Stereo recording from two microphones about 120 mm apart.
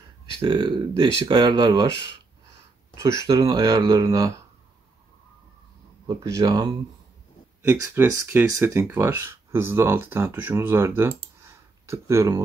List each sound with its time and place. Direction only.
0.4 s speech: 40° right (ahead or behind)
3.0 s speech: 25° right (ahead or behind)
6.0 s speech: 25° right (ahead or behind)
7.6 s speech: 20° right (ahead or behind)